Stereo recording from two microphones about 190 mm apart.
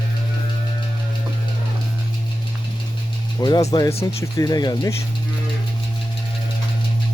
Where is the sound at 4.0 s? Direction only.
15° left (ahead or behind).